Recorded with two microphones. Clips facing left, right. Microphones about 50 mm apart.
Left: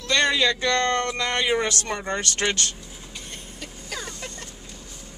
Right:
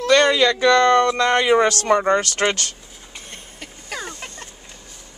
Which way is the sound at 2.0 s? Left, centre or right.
Right.